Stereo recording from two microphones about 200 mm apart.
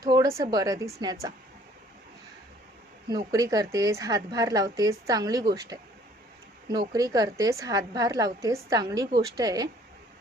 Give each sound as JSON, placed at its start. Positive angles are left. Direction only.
{"t": 0.0, "sound": "a sound", "side_deg": -20}
{"t": 0.3, "sound": "a woman's voice", "side_deg": -20}
{"t": 3.1, "sound": "a woman's voice", "side_deg": -20}